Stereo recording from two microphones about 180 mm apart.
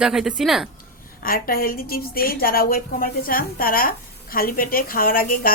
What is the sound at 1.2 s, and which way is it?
A woman's voice, 55° left (ahead or behind).